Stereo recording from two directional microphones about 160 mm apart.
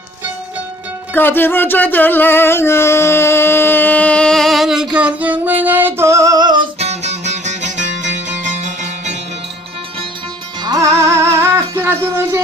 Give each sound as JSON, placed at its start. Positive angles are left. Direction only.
{"t": 1.1, "sound": "music", "side_deg": 15}
{"t": 6.7, "sound": "music", "side_deg": -40}
{"t": 10.6, "sound": "music", "side_deg": -25}